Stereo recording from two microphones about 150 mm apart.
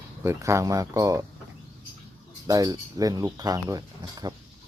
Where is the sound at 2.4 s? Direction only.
25° right (ahead or behind).